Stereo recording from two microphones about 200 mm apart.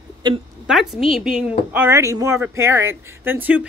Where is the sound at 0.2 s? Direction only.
20° right (ahead or behind).